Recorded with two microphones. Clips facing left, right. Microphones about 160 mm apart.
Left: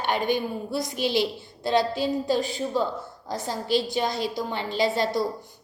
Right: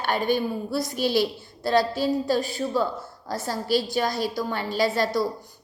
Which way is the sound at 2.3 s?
20° left (ahead or behind).